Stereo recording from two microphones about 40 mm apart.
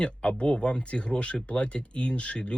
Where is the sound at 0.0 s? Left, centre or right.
Left.